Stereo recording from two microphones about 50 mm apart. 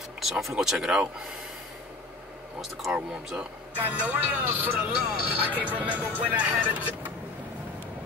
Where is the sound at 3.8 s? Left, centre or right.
Right.